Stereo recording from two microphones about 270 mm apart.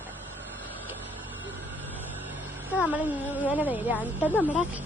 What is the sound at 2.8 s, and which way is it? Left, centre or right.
Speech, centre.